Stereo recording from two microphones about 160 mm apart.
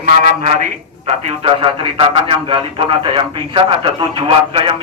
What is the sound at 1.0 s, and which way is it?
Speech, 40° right (ahead or behind).